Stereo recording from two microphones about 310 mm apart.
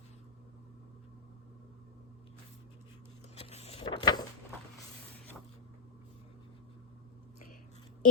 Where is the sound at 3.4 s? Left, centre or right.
Centre.